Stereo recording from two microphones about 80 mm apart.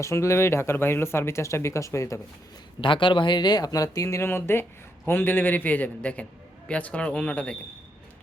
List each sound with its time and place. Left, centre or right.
0.0 s speech: left
2.8 s speech: left
4.3 s a man's voice: left; by 7.5 s centre